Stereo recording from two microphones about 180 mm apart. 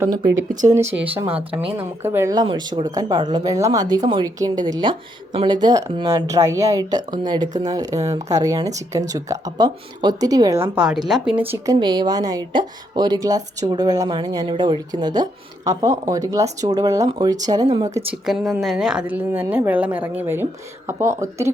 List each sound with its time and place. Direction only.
0.6 s a woman's voice: 15° right (ahead or behind)
10.8 s a woman's voice: 5° right (ahead or behind); by 18.0 s 20° right (ahead or behind)
18.1 s a woman's voice: 5° right (ahead or behind)